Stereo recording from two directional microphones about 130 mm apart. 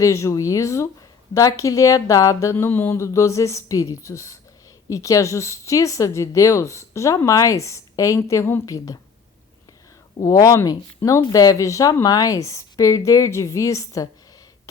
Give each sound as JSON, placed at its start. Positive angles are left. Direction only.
{"t": 0.0, "sound": "a woman's voice", "side_deg": 20}
{"t": 10.2, "sound": "a woman's voice", "side_deg": 25}